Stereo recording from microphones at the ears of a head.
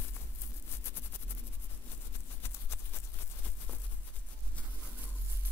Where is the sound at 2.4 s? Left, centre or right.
Left.